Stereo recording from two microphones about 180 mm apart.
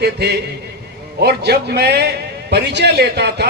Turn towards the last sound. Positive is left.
turn(degrees=-65)  # may be behind; listen again after turning